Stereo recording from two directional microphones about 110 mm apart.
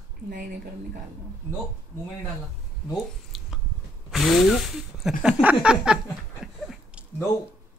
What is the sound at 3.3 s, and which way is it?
Squish, centre (ahead or behind).